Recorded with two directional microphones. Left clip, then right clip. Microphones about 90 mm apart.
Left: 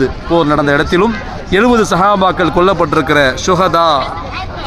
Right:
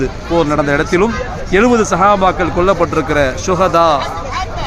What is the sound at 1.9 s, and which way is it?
Speech, 75° left (ahead or behind).